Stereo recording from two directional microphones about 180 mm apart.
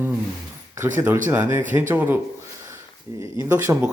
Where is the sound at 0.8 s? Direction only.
15° right (ahead or behind).